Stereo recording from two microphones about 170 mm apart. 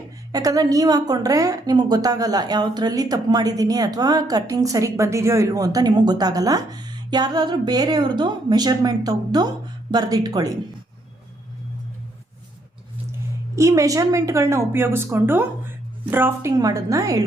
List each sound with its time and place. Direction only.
0.3 s a woman's voice: 20° right (ahead or behind)
13.6 s a woman's voice: 20° right (ahead or behind)